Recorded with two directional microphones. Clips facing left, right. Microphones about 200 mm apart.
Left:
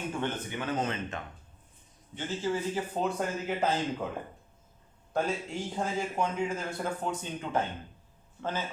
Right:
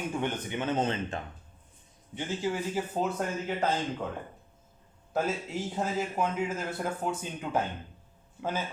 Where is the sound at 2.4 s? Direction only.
10° right (ahead or behind).